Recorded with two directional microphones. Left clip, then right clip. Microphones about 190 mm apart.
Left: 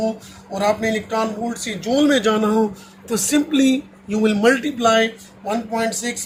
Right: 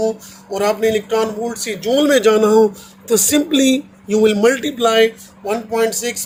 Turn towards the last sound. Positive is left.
turn(degrees=-50)  # may be behind; listen again after turning